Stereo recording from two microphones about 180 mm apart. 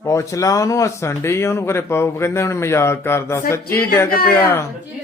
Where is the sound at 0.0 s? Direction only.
15° left (ahead or behind).